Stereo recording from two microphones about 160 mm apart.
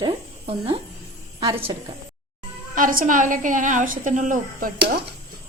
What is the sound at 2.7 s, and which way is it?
A woman's voice, 60° right (ahead or behind).